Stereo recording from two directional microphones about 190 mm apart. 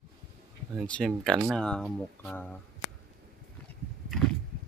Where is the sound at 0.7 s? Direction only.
5° left (ahead or behind).